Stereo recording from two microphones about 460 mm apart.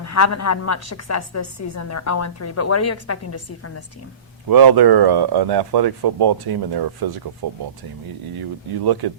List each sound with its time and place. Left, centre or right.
0.0 s a woman's voice: left
4.4 s speech: right
8.8 s speech: right